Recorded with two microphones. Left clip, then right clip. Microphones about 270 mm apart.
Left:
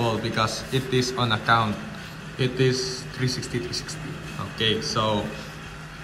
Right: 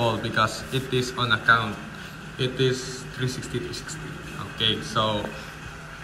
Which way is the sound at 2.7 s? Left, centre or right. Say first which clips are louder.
Left 3 dB; centre.